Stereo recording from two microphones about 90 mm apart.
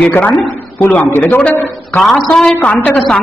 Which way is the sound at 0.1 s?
20° left (ahead or behind).